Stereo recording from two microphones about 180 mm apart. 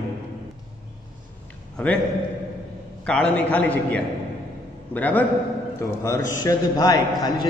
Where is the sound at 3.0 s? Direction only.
5° left (ahead or behind).